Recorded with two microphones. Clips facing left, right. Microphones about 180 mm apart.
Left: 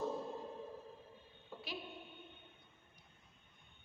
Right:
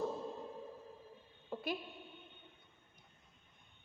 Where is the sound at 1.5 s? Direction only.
50° right (ahead or behind).